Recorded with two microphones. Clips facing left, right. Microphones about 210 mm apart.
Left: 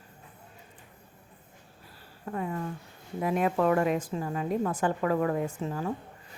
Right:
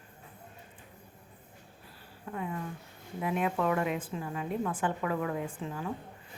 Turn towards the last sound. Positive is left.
turn(degrees=40)  # may be behind; listen again after turning